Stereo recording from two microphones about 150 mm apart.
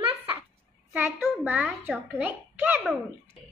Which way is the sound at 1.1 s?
15° right (ahead or behind).